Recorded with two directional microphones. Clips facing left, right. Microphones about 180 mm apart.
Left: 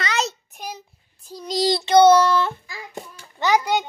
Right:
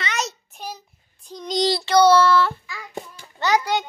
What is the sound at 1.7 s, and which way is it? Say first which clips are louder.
Child singing: left 3 dB; 20° left (ahead or behind).